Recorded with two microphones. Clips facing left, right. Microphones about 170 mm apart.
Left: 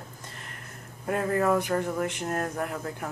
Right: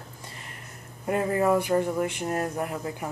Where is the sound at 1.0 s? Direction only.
5° right (ahead or behind).